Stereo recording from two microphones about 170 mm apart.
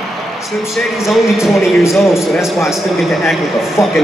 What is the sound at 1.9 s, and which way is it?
Speech, centre (ahead or behind).